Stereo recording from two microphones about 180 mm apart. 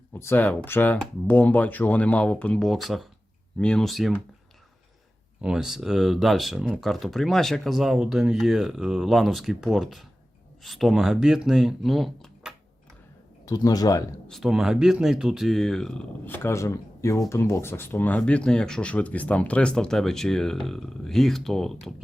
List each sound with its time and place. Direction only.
0.1 s speech: 10° left (ahead or behind)
5.4 s speech: 5° right (ahead or behind)
13.4 s speech: 20° left (ahead or behind)
14.3 s speech: centre (ahead or behind)